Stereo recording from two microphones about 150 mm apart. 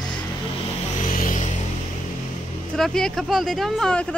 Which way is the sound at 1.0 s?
65° left (ahead or behind).